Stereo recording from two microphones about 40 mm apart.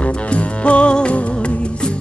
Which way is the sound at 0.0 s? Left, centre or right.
Left.